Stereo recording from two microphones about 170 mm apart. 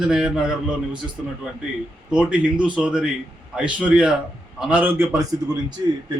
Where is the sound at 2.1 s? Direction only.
5° right (ahead or behind).